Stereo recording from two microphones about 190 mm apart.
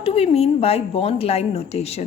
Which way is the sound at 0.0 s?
30° left (ahead or behind).